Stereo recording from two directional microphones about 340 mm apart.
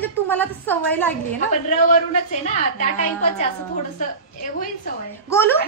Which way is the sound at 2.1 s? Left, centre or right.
Left.